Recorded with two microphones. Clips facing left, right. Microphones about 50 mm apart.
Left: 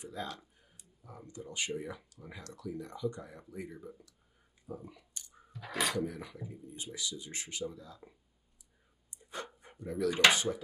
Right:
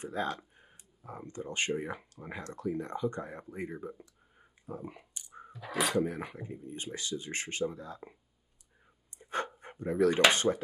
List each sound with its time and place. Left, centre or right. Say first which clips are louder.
0.0 s speech: right 7 dB; right
4.4 s clicking: right 3 dB; right
5.6 s speech: right 2 dB; centre
5.9 s speech: right 5 dB; right
9.2 s a sound: right 8 dB; right
10.3 s speech: right 4 dB; right